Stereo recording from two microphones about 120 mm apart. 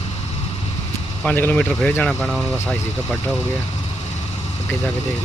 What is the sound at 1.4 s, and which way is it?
Speech, 15° left (ahead or behind).